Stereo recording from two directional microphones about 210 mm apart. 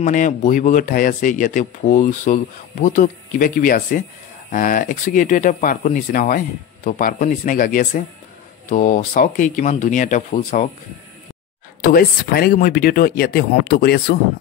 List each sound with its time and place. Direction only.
0.0 s speech: 40° left (ahead or behind)
11.8 s speech: 45° left (ahead or behind)